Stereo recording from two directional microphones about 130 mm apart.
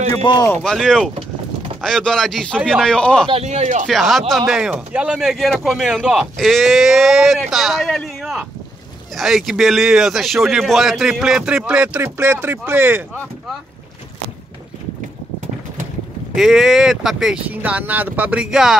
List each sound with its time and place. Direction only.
0.2 s speech: 35° left (ahead or behind)
0.6 s speech: 5° left (ahead or behind)
3.4 s speech: 65° right (ahead or behind)
3.8 s speech: centre (ahead or behind); by 13.0 s 15° right (ahead or behind)
13.1 s speech: 10° left (ahead or behind)
16.3 s speech: 5° right (ahead or behind)